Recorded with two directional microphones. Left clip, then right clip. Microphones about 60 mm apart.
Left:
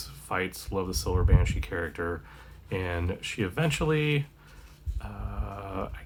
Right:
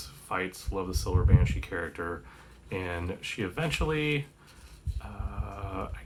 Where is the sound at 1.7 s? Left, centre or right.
Left.